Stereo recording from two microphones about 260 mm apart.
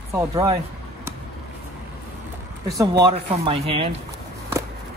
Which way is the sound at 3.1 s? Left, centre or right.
Right.